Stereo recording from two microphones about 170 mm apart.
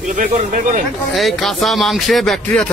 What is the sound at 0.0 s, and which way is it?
Speech, 50° right (ahead or behind).